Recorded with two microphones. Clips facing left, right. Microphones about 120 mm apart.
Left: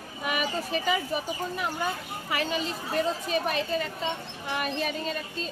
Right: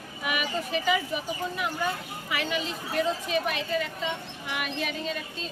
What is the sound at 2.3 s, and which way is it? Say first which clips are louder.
Speech: left 1 dB; 40° left (ahead or behind).